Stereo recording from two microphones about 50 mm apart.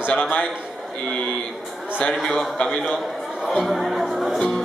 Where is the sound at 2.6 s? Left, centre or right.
Left.